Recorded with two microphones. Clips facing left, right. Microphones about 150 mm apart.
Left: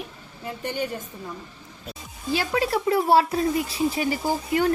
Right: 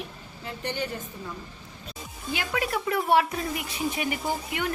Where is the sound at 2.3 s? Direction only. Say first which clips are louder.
Left 5 dB; 30° left (ahead or behind).